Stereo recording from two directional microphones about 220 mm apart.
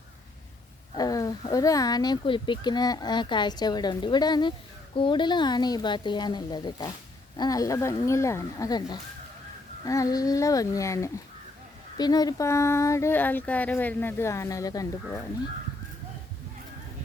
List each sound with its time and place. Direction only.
0.9 s speech: 15° left (ahead or behind)